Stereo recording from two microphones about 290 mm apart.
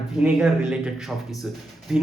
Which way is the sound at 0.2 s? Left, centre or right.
Centre.